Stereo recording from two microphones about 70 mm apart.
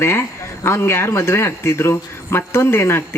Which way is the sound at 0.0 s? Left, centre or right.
Left.